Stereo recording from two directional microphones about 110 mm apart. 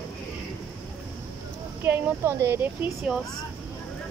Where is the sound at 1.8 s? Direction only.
20° right (ahead or behind).